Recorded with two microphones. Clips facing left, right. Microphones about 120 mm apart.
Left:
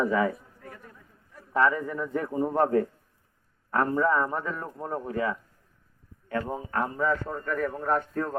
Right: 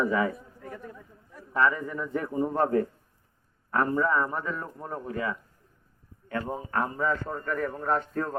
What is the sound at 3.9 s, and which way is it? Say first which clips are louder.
Speech: left 1 dB; 10° left (ahead or behind).